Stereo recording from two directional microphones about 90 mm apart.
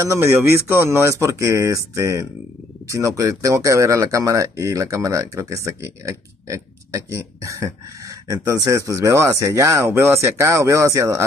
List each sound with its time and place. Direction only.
0.0 s speech: 30° right (ahead or behind)